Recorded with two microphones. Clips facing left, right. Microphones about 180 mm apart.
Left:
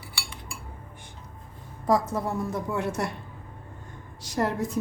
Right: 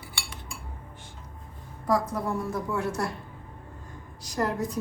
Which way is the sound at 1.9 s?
25° left (ahead or behind).